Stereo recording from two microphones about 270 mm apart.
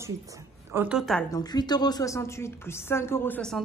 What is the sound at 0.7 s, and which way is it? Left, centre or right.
Speech, centre.